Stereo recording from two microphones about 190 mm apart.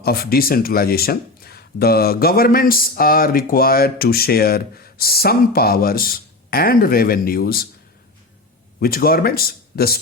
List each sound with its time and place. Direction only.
0.0 s speech: 50° left (ahead or behind)
8.8 s speech: 50° left (ahead or behind)